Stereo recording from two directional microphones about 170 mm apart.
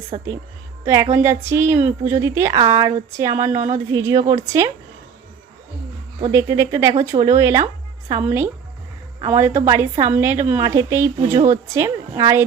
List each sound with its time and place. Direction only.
0.1 s a woman's voice: 40° right (ahead or behind)
1.1 s a woman's voice: 15° right (ahead or behind)
6.3 s a woman's voice: 20° right (ahead or behind)
11.3 s speech: 45° right (ahead or behind)
11.7 s a woman's voice: 15° right (ahead or behind)